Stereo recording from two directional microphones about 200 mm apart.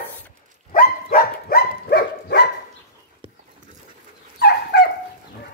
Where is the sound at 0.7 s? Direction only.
45° left (ahead or behind).